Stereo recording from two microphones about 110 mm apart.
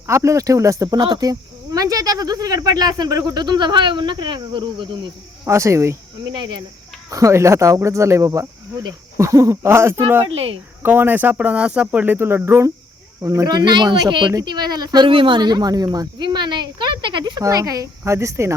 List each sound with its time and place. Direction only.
0.1 s speech: 25° right (ahead or behind)
0.9 s speech: 40° right (ahead or behind)
5.5 s speech: 25° right (ahead or behind)
6.2 s speech: 40° right (ahead or behind)
7.1 s speech: 30° right (ahead or behind)
10.2 s speech: 60° right (ahead or behind)
10.8 s speech: 20° right (ahead or behind); by 17.4 s 45° right (ahead or behind)
17.4 s speech: 35° right (ahead or behind)